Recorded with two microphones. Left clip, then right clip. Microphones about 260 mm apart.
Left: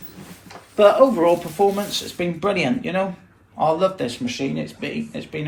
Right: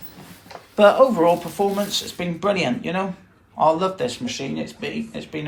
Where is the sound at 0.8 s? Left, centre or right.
Centre.